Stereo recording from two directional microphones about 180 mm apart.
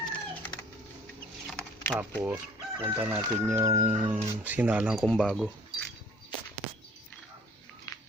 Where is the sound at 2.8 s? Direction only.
10° right (ahead or behind).